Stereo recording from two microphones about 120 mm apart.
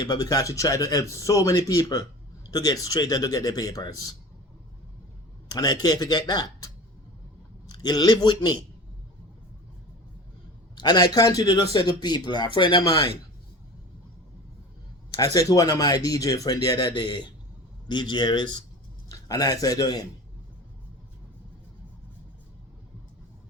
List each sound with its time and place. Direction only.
0.0 s a man's voice: 35° left (ahead or behind)
5.5 s a man's voice: 35° left (ahead or behind)
7.7 s a man's voice: 35° left (ahead or behind)
10.8 s a man's voice: 35° left (ahead or behind)
15.2 s a man's voice: 30° left (ahead or behind)
16.7 s a man's voice: 40° left (ahead or behind)